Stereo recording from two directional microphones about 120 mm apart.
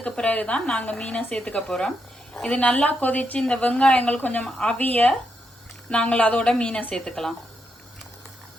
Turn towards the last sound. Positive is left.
turn(degrees=5)  # may be behind; listen again after turning